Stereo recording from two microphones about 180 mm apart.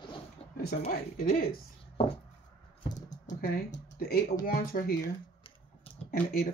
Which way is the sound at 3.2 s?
50° left (ahead or behind).